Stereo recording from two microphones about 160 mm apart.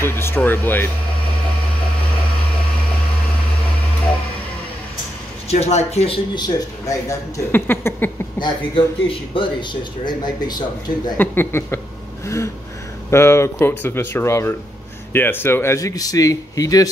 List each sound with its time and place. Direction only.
0.0 s speech: 15° left (ahead or behind)
5.5 s speech: 45° left (ahead or behind)
6.3 s speech: 25° left (ahead or behind)
8.4 s speech: 30° left (ahead or behind)
11.1 s speech: 15° left (ahead or behind)
13.1 s speech: 15° left (ahead or behind)